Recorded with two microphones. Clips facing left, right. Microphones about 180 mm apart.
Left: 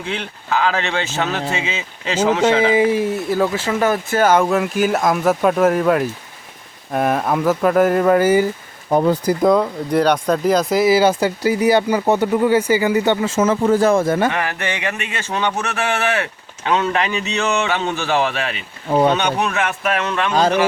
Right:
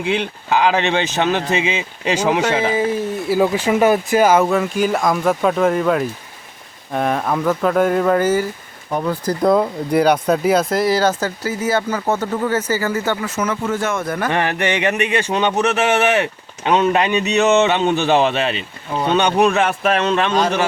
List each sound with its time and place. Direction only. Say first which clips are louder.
0.0 s speech: right 6 dB; 15° right (ahead or behind)
2.7 s speech: left 3 dB; 10° left (ahead or behind)
3.2 s speech: right 2 dB; 15° right (ahead or behind); by 8.4 s 10° left (ahead or behind)
8.9 s speech: left 6 dB; 35° left (ahead or behind)
9.4 s speech: right 3 dB; 5° right (ahead or behind); by 14.3 s 25° left (ahead or behind)
14.3 s speech: right 4 dB; 20° right (ahead or behind)